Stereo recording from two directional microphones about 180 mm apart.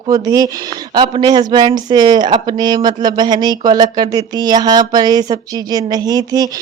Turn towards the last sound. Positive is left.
turn(degrees=-20)  # may be behind; listen again after turning